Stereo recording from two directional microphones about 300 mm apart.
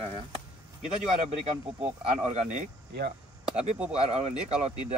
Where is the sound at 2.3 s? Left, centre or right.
Right.